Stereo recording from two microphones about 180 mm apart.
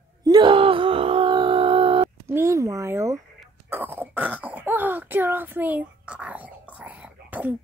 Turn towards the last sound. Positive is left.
turn(degrees=-10)  # may be behind; listen again after turning